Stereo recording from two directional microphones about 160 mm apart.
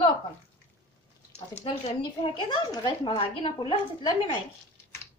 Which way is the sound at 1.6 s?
35° left (ahead or behind).